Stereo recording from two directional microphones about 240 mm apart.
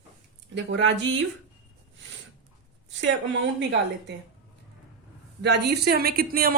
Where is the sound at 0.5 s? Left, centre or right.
Right.